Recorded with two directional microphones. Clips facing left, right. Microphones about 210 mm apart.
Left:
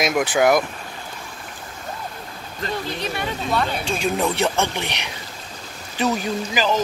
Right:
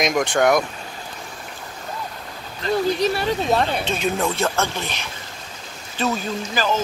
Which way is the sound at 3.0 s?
35° right (ahead or behind).